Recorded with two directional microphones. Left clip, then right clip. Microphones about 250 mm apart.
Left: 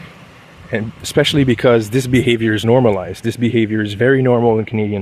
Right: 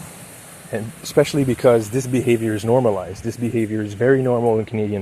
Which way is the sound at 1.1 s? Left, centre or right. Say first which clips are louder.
Left 3 dB; left.